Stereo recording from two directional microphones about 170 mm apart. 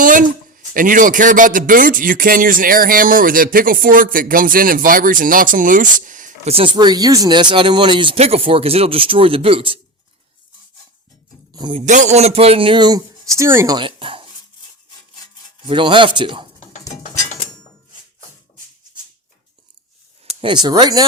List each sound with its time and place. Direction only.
0.0 s speech: 50° right (ahead or behind)
6.5 s speech: 30° right (ahead or behind)
11.5 s speech: 30° right (ahead or behind)
11.9 s speech: 45° right (ahead or behind); by 13.7 s 15° right (ahead or behind)
13.7 s speech: 30° right (ahead or behind)
15.6 s speech: 30° right (ahead or behind)
20.4 s speech: 25° right (ahead or behind)